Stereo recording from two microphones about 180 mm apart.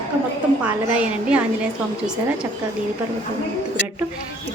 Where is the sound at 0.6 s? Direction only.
5° right (ahead or behind).